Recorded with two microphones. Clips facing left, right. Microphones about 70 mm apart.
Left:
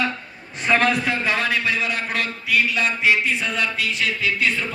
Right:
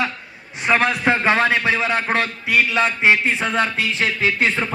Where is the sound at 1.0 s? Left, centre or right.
Right.